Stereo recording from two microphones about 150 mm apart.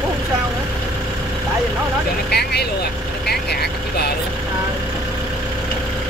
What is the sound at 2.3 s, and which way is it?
Vehicle, 90° left.